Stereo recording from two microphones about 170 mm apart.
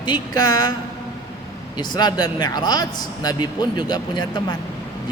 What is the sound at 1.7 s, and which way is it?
Speech, 25° left (ahead or behind).